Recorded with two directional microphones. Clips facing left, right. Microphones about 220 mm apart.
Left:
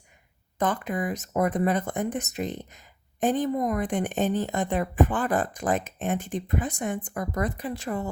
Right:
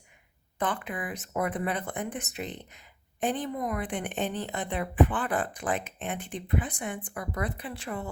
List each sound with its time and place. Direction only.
0.6 s speech: 40° left (ahead or behind)